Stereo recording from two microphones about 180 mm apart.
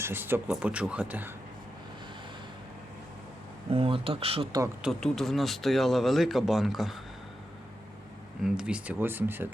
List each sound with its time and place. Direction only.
0.0 s speech: 10° right (ahead or behind)
3.7 s speech: 30° right (ahead or behind)
4.8 s speech: centre (ahead or behind)
8.4 s speech: 5° right (ahead or behind)